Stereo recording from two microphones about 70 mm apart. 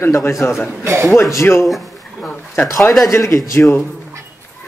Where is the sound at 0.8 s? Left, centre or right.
Right.